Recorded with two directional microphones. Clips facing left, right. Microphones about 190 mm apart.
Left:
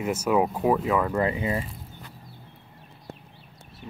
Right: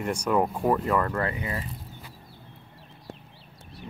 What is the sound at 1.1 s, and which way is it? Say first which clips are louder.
Speech: left 5 dB; 20° left (ahead or behind).